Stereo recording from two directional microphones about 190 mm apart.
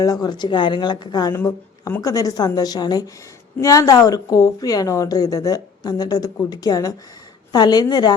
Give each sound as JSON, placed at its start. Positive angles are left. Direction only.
{"t": 0.0, "sound": "a woman's voice", "side_deg": 20}